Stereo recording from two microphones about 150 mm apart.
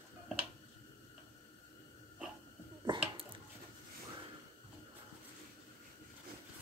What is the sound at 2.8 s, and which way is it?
Finger snapping, 35° right (ahead or behind).